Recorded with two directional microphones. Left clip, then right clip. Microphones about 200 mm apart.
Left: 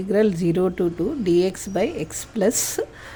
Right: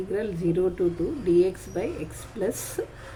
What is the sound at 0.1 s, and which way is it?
A woman's voice, 55° left (ahead or behind).